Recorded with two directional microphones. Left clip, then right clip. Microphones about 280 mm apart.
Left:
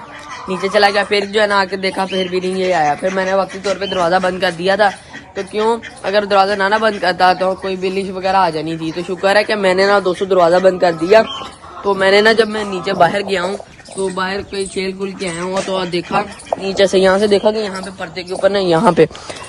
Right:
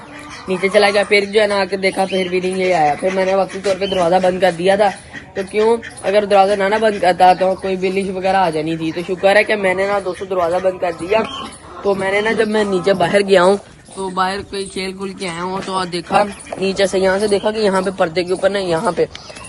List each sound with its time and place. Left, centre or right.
0.4 s speech: centre
12.9 s speech: centre
16.7 s speech: left
17.7 s speech: centre
18.5 s speech: left